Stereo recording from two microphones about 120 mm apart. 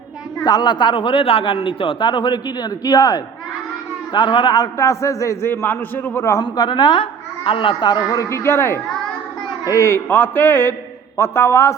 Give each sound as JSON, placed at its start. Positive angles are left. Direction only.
{"t": 0.3, "sound": "a man's voice", "side_deg": 35}
{"t": 6.4, "sound": "a man's voice", "side_deg": 40}